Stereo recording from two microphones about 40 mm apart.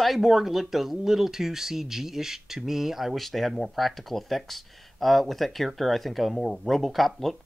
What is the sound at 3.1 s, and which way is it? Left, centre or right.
Speech, centre.